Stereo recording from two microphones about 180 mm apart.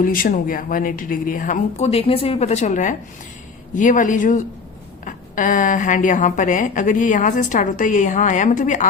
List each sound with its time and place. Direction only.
0.0 s a woman's voice: 50° left (ahead or behind)